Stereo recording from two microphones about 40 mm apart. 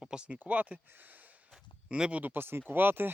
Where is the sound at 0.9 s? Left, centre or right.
Right.